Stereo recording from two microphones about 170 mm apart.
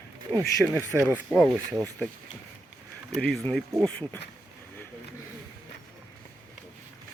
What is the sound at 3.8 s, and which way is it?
Speech, 10° left (ahead or behind).